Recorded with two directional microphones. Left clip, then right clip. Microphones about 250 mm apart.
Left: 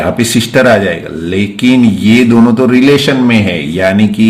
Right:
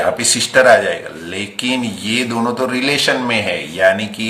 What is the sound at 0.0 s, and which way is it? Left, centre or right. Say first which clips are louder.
A man's voice: left 3 dB; centre.